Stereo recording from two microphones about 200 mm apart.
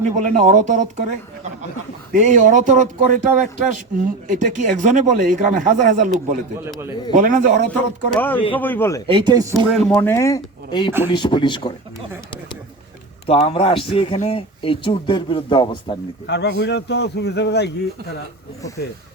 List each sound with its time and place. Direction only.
0.0 s speech: 35° right (ahead or behind)
2.1 s speech: 40° right (ahead or behind)
7.1 s speech: 40° right (ahead or behind)
7.7 s speech: 5° left (ahead or behind)
9.0 s speech: 25° right (ahead or behind)
9.7 s a man's voice: 5° left (ahead or behind); by 11.7 s 25° left (ahead or behind)
13.2 s a man's voice: 30° left (ahead or behind)
16.2 s a man's voice: 60° left (ahead or behind)